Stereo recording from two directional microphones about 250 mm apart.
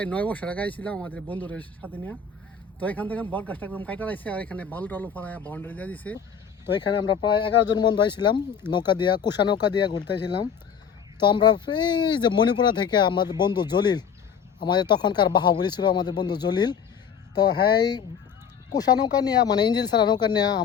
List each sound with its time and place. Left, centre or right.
0.0 s speech: centre
6.7 s speech: centre
11.2 s speech: centre